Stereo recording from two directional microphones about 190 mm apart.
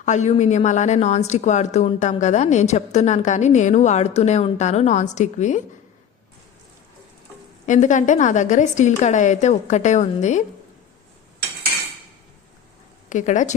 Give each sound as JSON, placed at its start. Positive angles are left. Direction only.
{"t": 0.0, "sound": "a woman's voice", "side_deg": 40}
{"t": 7.7, "sound": "a woman's voice", "side_deg": 40}
{"t": 13.1, "sound": "speech", "side_deg": 40}